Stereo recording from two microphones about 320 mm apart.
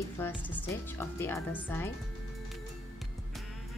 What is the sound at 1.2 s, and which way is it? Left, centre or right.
Speech, centre.